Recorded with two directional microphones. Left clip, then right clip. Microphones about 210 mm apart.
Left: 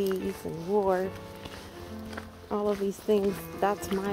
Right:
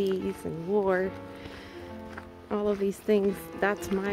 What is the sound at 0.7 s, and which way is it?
Speech, 25° right (ahead or behind).